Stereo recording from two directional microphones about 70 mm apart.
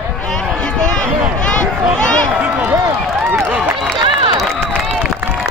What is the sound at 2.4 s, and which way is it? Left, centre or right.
Run, right.